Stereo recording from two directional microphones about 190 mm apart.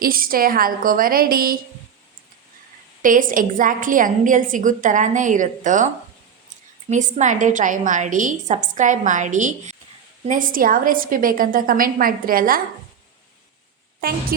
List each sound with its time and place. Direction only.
0.0 s a woman's voice: 50° right (ahead or behind)
3.0 s a woman's voice: 45° right (ahead or behind)
6.9 s a woman's voice: 40° right (ahead or behind)